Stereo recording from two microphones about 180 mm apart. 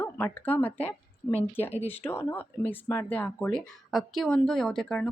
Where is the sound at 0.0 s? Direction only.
10° left (ahead or behind).